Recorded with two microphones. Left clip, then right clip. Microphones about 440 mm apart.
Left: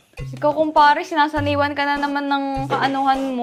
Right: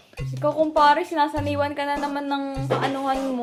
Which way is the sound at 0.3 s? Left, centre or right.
Left.